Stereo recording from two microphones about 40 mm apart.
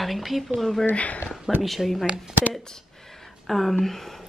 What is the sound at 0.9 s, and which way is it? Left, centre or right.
Speech, left.